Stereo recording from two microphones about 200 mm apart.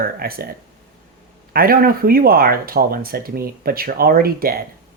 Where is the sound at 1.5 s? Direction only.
45° right (ahead or behind).